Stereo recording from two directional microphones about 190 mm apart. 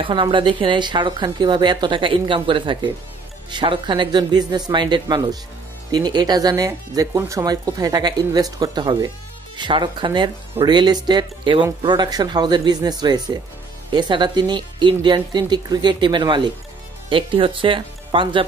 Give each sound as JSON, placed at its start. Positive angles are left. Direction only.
{"t": 0.0, "sound": "speech", "side_deg": -25}